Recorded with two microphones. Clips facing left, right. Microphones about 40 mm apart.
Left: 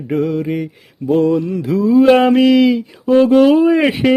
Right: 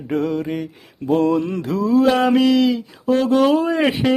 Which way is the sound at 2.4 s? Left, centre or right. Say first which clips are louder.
Left 4 dB; centre.